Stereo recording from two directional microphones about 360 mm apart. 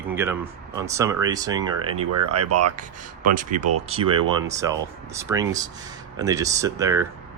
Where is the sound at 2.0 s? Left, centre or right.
Right.